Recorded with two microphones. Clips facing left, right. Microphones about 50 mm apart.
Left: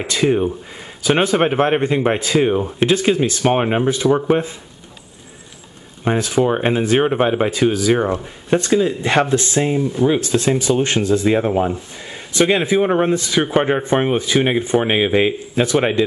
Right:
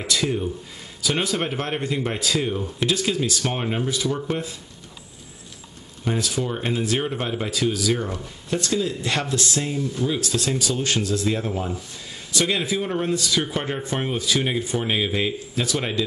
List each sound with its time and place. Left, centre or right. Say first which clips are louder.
0.0 s speech: left 7 dB; left
6.0 s speech: left 9 dB; left